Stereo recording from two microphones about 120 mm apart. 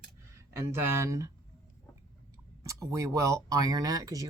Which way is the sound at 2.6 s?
25° right (ahead or behind).